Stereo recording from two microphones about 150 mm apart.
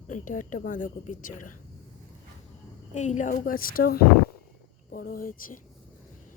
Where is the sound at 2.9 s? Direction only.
50° left (ahead or behind); by 5.6 s 70° left (ahead or behind).